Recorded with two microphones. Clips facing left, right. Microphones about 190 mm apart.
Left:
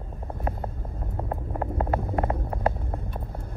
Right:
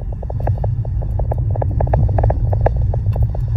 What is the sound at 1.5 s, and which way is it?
Rumble, 25° right (ahead or behind).